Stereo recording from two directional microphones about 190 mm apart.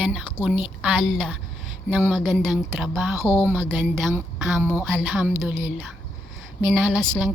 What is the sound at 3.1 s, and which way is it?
A woman's voice, 15° right (ahead or behind).